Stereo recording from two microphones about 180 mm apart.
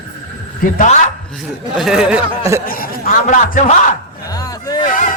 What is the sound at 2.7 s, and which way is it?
Speech, 55° left (ahead or behind).